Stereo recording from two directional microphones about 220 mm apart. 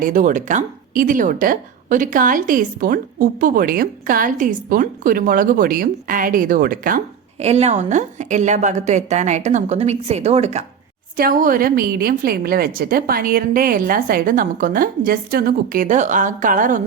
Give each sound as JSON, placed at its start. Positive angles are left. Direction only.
{"t": 0.0, "sound": "speech", "side_deg": -35}
{"t": 11.2, "sound": "speech", "side_deg": -40}